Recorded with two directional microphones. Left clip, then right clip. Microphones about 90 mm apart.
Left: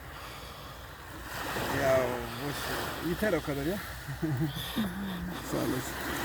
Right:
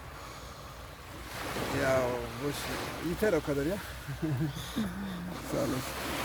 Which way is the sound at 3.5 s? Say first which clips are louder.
Right 3 dB; 30° right (ahead or behind).